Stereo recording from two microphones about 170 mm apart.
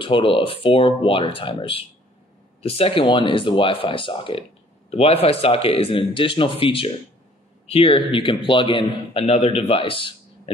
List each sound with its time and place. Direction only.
0.0 s a man's voice: 30° left (ahead or behind)